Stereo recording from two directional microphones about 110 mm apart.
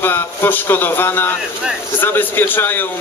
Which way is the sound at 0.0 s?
20° left (ahead or behind).